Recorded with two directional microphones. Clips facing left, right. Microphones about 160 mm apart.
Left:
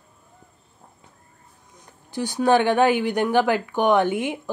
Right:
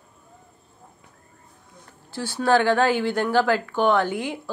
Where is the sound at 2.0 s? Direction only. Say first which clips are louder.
Left 2 dB; 15° left (ahead or behind).